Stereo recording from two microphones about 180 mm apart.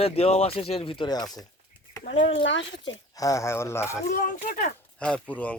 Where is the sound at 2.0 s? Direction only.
85° left.